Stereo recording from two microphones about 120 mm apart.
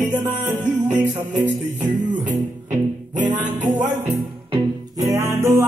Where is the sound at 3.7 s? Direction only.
15° right (ahead or behind).